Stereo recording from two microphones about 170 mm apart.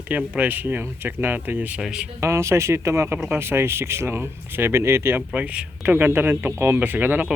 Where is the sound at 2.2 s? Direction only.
15° right (ahead or behind).